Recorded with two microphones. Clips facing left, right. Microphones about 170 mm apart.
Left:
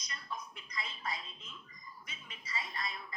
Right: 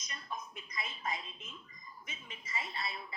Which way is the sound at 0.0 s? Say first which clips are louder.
Even; 25° right (ahead or behind).